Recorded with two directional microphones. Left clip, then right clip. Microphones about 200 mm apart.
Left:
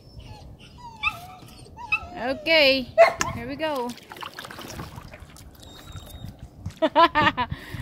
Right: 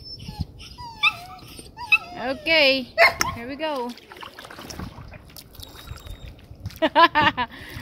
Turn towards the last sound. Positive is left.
turn(degrees=0)  # may be behind; listen again after turning